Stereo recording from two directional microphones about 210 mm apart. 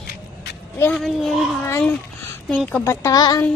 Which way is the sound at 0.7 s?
5° left (ahead or behind).